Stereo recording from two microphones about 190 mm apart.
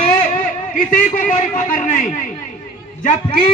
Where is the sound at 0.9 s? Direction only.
45° left (ahead or behind).